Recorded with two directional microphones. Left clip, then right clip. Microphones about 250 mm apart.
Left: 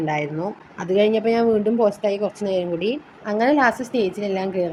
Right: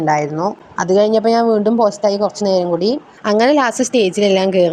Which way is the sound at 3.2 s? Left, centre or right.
Right.